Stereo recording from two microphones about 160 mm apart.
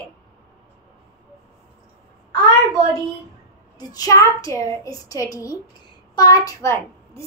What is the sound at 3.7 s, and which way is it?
A child's voice, 25° left (ahead or behind).